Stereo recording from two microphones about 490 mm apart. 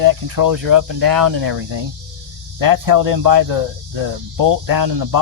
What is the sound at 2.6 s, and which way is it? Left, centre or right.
Speech, right.